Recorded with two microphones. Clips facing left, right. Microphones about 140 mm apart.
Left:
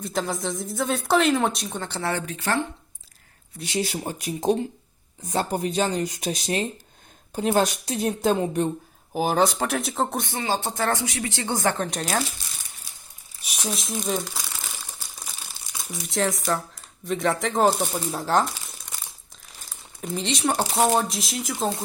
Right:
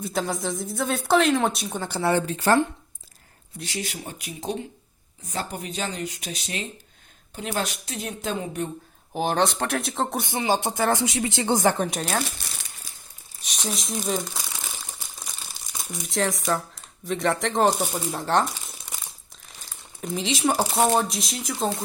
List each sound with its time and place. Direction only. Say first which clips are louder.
0.0 s speech: even; centre (ahead or behind)
2.1 s speech: right 6 dB; 30° right (ahead or behind)
3.8 s speech: left 7 dB; 35° left (ahead or behind)
9.1 s speech: left 2 dB; 5° left (ahead or behind)
10.2 s speech: right 3 dB; 15° right (ahead or behind)
11.0 s speech: right 4 dB; 25° right (ahead or behind); by 12.0 s 5° right (ahead or behind)
13.4 s a sound: even; 10° left (ahead or behind)
13.7 s speech: even; centre (ahead or behind)
15.8 s speech: left 1 dB; centre (ahead or behind)
19.5 s crumpling: even; centre (ahead or behind)
20.7 s speech: even; centre (ahead or behind)